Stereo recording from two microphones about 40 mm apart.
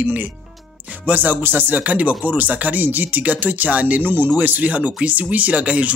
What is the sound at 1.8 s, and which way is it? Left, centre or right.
Speech, right.